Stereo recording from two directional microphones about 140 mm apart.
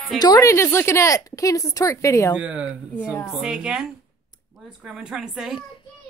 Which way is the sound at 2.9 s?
10° left (ahead or behind).